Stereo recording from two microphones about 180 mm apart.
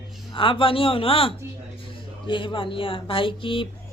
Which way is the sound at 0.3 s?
30° left (ahead or behind).